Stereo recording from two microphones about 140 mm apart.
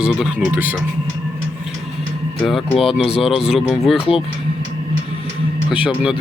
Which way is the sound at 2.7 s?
40° left (ahead or behind).